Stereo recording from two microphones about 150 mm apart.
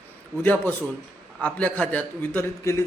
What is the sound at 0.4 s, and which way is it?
A man's voice, 10° left (ahead or behind).